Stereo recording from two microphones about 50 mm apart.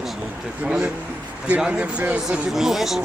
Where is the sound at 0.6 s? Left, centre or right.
Right.